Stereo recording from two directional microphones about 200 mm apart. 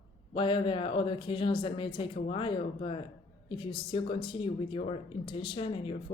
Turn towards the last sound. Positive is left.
turn(degrees=25)  # may be behind; listen again after turning